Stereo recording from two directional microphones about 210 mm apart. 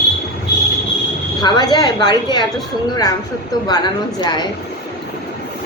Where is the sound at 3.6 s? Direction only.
20° left (ahead or behind).